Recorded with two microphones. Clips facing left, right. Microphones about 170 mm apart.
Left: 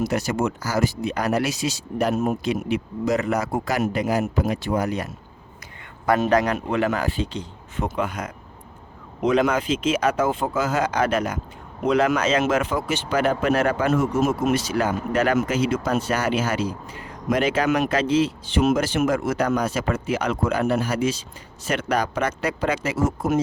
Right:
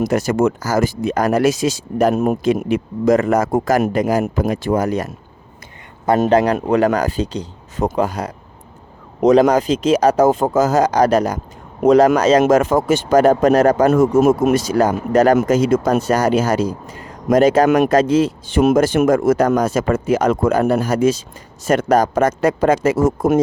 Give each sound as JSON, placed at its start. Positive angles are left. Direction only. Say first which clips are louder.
{"t": 0.0, "sound": "speech", "louder": "right 7 dB", "side_deg": -45}
{"t": 6.1, "sound": "speech", "louder": "right 7 dB", "side_deg": -35}
{"t": 14.2, "sound": "speech", "louder": "right 8 dB", "side_deg": -55}